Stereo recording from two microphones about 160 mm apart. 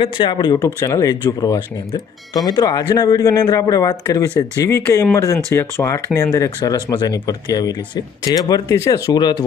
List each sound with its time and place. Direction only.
0.0 s speech: 30° left (ahead or behind)